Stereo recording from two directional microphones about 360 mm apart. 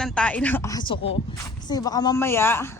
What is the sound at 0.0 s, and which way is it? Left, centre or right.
A woman's voice, centre.